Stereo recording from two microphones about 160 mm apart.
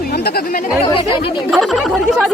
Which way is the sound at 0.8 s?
30° left (ahead or behind).